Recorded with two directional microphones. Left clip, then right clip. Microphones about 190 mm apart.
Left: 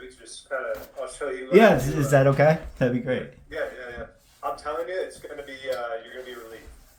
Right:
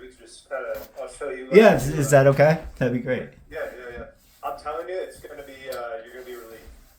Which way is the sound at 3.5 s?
30° left (ahead or behind).